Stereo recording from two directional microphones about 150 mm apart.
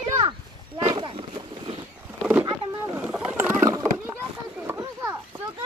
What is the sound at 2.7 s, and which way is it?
Boat, 20° right (ahead or behind).